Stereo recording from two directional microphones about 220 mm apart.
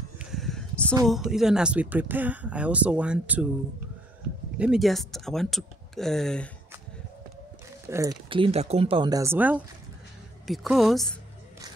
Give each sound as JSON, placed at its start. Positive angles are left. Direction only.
{"t": 0.2, "sound": "a sound", "side_deg": 0}
{"t": 1.0, "sound": "speech", "side_deg": 0}
{"t": 4.6, "sound": "speech", "side_deg": 0}
{"t": 7.9, "sound": "speech", "side_deg": -15}